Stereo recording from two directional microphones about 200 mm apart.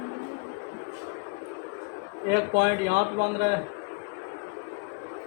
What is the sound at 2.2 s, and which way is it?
Speech, 55° right (ahead or behind).